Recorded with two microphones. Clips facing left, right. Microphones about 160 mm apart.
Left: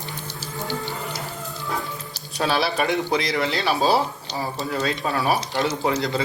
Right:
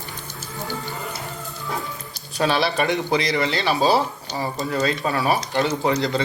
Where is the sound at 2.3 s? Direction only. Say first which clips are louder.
Right 2 dB; centre (ahead or behind).